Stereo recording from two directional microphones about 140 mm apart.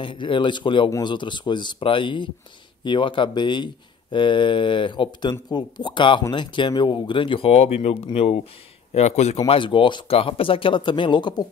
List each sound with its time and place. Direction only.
0.0 s speech: 35° left (ahead or behind); by 9.4 s 50° left (ahead or behind)
9.5 s speech: 40° left (ahead or behind)